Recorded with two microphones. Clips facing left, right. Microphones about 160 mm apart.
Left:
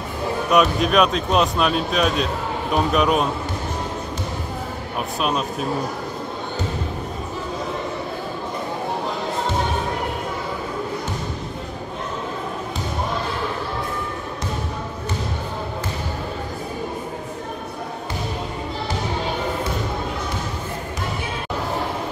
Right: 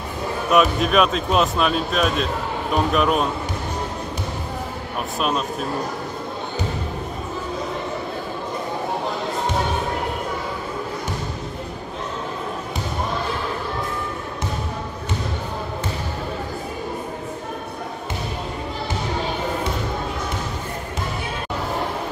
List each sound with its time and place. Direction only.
0.5 s speech: centre (ahead or behind)